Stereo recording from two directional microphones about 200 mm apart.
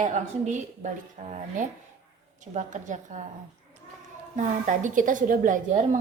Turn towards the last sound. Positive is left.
turn(degrees=-35)  # may be behind; listen again after turning